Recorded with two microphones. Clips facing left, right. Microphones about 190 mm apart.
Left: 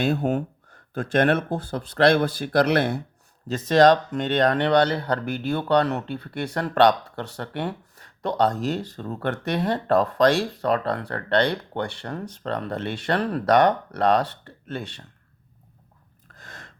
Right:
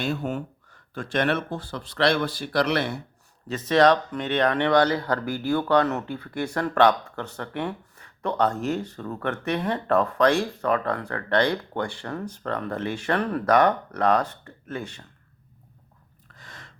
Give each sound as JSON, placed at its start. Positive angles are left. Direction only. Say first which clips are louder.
{"t": 0.2, "sound": "speech", "louder": "left 5 dB", "side_deg": 40}
{"t": 0.7, "sound": "speech", "louder": "left 5 dB", "side_deg": 50}
{"t": 3.7, "sound": "speech", "louder": "left 2 dB", "side_deg": 40}